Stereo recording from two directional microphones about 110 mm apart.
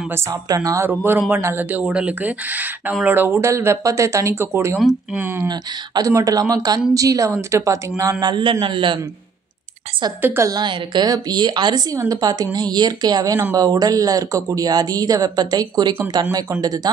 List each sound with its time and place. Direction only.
0.1 s speech: 30° right (ahead or behind)
5.5 s a man's voice: 35° right (ahead or behind)
10.2 s speech: 20° right (ahead or behind)
10.5 s speech: 45° right (ahead or behind)